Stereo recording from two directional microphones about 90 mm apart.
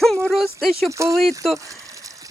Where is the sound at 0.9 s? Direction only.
35° right (ahead or behind).